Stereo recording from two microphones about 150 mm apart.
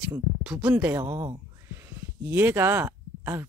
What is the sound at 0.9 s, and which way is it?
Speech, 25° right (ahead or behind).